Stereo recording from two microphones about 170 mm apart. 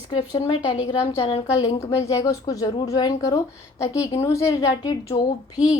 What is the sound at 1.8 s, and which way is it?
A woman's voice, 20° left (ahead or behind).